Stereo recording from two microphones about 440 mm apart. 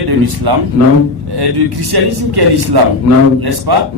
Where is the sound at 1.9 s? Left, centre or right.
Right.